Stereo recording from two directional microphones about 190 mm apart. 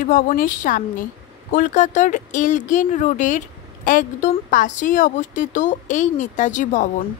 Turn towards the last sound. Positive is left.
turn(degrees=45)  # may be behind; listen again after turning